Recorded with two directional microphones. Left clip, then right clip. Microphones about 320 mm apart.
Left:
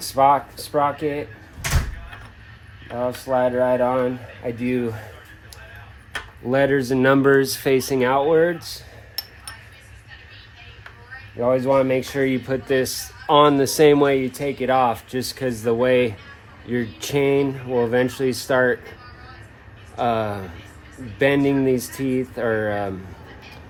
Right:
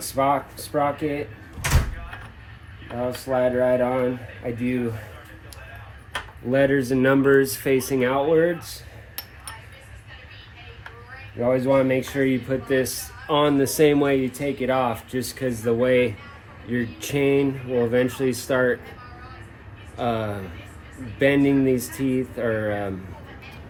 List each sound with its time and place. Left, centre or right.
0.1 s speech: left
3.0 s speech: centre
6.5 s speech: left
11.3 s speech: centre
20.0 s speech: left
21.8 s speech: centre
22.0 s speech: left